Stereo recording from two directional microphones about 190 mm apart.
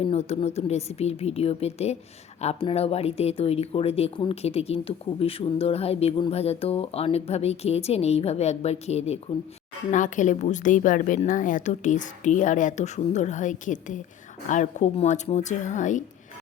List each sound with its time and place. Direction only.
0.0 s speech: 35° left (ahead or behind)